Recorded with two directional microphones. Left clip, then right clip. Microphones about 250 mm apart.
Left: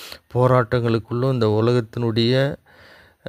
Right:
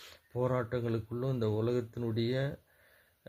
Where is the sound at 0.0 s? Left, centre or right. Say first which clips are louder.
Left 15 dB; left.